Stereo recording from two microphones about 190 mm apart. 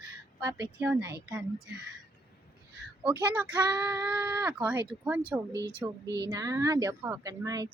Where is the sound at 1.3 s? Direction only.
5° right (ahead or behind).